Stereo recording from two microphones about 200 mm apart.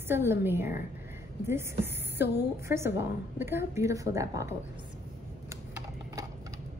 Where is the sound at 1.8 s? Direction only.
55° left (ahead or behind).